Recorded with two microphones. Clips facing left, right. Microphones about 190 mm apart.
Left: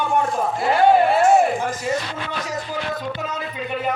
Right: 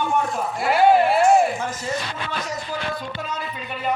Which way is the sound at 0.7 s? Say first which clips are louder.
Even; 5° right (ahead or behind).